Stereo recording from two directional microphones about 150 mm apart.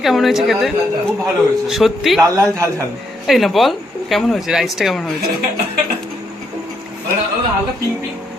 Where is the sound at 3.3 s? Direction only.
Centre (ahead or behind).